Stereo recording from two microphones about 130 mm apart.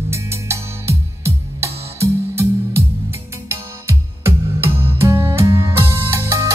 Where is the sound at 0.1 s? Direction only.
20° right (ahead or behind).